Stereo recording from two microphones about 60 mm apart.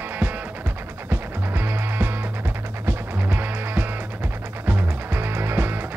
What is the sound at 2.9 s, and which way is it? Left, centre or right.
Music, right.